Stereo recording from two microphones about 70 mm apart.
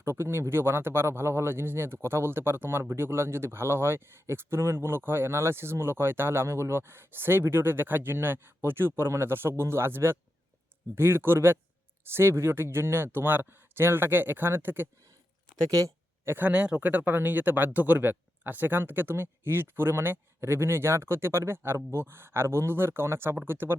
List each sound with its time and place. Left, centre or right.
0.0 s speech: right
15.7 s a sound: right
16.5 s speech: centre; by 23.7 s right